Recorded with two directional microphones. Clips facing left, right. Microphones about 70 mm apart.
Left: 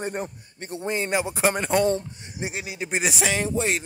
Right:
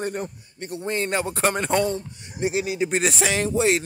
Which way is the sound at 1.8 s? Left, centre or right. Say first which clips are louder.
Left 2 dB; left.